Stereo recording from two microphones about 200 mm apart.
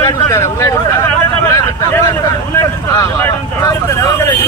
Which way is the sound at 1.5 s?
15° left (ahead or behind).